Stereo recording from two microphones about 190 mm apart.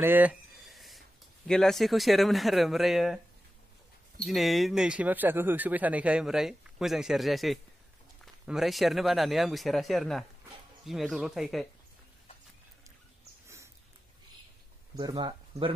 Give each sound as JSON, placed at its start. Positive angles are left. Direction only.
{"t": 0.0, "sound": "a sound", "side_deg": -10}
{"t": 1.5, "sound": "speech", "side_deg": 0}
{"t": 4.2, "sound": "speech", "side_deg": 0}
{"t": 15.0, "sound": "speech", "side_deg": -20}